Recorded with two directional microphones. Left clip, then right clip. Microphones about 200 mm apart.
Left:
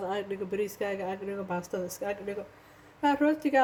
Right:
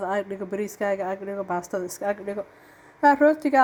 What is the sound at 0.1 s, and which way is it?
A woman's voice, 20° right (ahead or behind).